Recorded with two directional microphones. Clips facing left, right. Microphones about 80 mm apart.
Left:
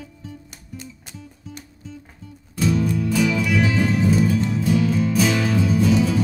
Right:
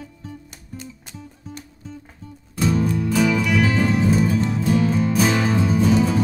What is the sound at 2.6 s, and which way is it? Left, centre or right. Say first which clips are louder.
Music: even; right.